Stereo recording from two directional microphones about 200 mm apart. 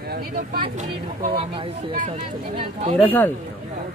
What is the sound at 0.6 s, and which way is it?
Speech, 35° right (ahead or behind).